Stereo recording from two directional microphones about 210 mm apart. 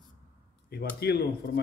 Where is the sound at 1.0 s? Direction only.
50° left (ahead or behind).